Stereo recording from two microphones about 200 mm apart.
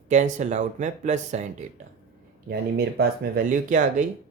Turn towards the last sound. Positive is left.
turn(degrees=-40)  # may be behind; listen again after turning